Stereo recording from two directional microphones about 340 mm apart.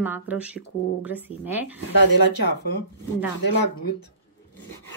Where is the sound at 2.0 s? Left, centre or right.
Left.